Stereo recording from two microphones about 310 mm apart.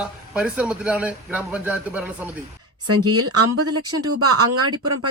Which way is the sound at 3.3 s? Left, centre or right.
Right.